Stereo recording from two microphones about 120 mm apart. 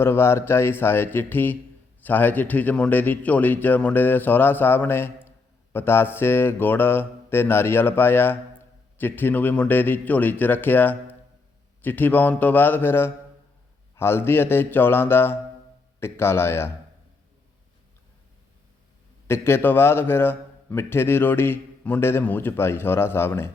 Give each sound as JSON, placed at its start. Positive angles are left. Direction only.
{"t": 0.0, "sound": "a man's voice", "side_deg": 20}
{"t": 2.0, "sound": "mantra", "side_deg": 15}
{"t": 13.9, "sound": "a man's voice", "side_deg": 20}
{"t": 19.3, "sound": "a man's voice", "side_deg": 20}